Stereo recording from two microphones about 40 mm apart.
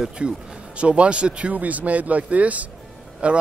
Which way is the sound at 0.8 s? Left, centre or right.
Right.